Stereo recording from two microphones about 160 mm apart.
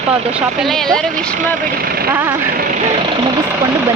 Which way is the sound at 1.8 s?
70° right (ahead or behind).